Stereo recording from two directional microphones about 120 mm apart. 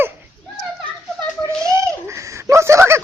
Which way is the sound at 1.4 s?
25° right (ahead or behind).